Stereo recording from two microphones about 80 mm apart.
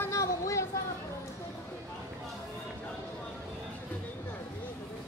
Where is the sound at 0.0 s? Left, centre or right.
Left.